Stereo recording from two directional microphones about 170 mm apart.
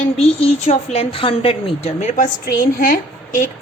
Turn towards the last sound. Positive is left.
turn(degrees=60)  # may be behind; listen again after turning